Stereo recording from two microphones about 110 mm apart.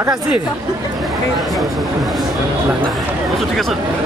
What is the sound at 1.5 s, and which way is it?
Speech, centre (ahead or behind).